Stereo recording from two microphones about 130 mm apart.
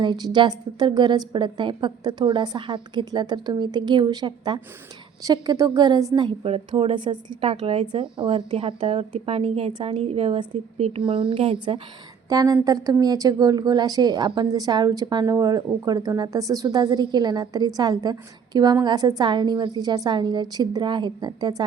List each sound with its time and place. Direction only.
0.0 s a woman's voice: 35° right (ahead or behind)
6.4 s a woman's voice: 50° right (ahead or behind)
7.5 s speech: 60° right (ahead or behind)
8.1 s a woman's voice: 40° right (ahead or behind)
11.0 s a woman's voice: 40° right (ahead or behind)
12.3 s a woman's voice: 30° right (ahead or behind)